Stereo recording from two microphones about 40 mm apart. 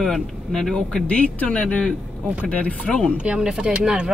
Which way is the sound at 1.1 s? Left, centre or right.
Left.